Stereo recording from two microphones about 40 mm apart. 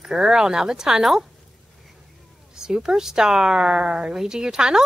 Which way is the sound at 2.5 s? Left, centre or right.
Centre.